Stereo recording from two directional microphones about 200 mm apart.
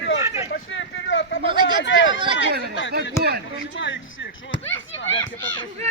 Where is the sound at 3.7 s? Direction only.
65° left (ahead or behind).